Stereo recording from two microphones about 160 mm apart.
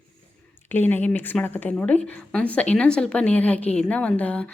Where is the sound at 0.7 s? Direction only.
10° left (ahead or behind).